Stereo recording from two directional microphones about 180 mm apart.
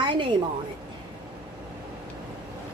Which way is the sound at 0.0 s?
25° right (ahead or behind).